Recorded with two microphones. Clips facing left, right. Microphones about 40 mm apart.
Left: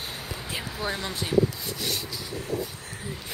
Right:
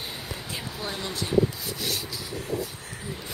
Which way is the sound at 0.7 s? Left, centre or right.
Centre.